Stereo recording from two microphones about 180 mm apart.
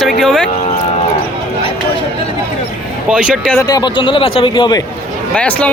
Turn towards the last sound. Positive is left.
turn(degrees=5)  # may be behind; listen again after turning